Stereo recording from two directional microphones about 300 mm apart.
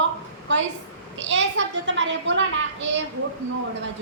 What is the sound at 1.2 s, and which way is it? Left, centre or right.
A woman's voice, right.